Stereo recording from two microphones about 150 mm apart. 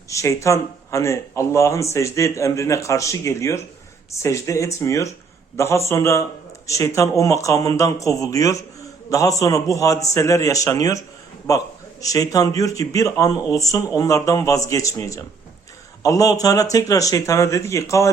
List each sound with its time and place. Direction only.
0.1 s a man's voice: 20° left (ahead or behind)